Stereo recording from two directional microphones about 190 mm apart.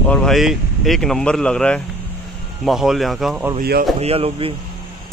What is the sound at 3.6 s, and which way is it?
Speech, 55° right (ahead or behind).